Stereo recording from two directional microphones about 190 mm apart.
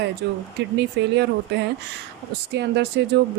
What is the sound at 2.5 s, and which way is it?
Speech, 60° right (ahead or behind).